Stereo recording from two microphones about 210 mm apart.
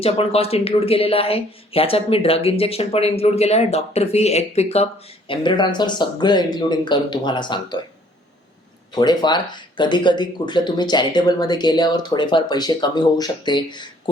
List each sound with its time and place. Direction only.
0.0 s speech: 30° left (ahead or behind)
9.0 s speech: 20° left (ahead or behind)